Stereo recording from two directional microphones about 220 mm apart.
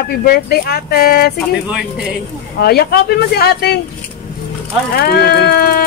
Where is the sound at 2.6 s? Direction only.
45° left (ahead or behind).